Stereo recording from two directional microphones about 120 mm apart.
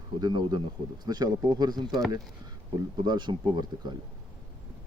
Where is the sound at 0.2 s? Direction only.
35° right (ahead or behind).